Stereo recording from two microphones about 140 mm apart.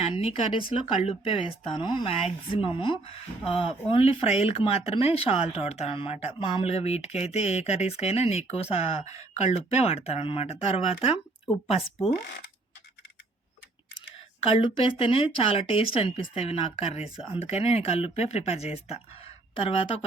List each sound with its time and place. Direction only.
0.0 s speech: 45° left (ahead or behind)
14.4 s speech: 40° left (ahead or behind)